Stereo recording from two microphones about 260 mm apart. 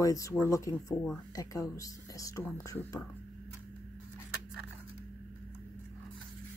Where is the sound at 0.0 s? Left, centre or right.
Centre.